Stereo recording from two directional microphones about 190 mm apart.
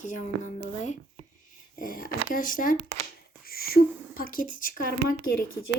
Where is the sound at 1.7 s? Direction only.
50° left (ahead or behind).